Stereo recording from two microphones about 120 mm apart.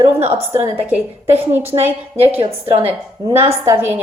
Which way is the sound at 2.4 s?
50° right (ahead or behind).